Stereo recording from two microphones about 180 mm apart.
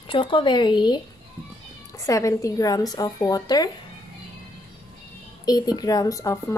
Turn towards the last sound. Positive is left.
turn(degrees=20)  # may be behind; listen again after turning